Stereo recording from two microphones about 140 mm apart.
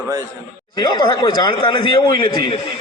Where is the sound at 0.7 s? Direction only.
30° left (ahead or behind).